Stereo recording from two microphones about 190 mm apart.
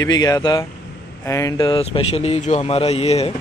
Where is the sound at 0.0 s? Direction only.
20° left (ahead or behind).